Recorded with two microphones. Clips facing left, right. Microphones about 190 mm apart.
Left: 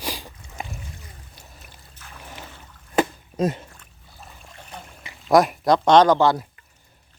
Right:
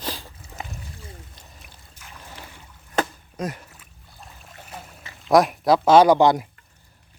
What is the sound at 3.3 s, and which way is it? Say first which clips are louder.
Speech: left 7 dB; 25° left (ahead or behind).